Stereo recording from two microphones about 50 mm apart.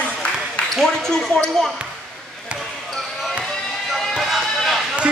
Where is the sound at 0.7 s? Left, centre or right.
Centre.